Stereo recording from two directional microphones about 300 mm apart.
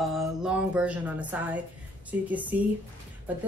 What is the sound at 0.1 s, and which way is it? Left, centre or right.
A woman's voice, centre.